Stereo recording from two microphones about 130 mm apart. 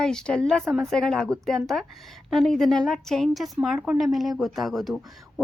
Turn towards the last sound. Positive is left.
turn(degrees=0)  # may be behind; listen again after turning